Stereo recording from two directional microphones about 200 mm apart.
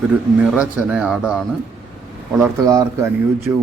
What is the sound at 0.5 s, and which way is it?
Speech, 5° right (ahead or behind).